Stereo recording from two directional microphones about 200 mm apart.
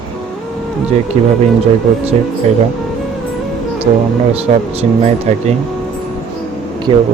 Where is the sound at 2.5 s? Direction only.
35° right (ahead or behind).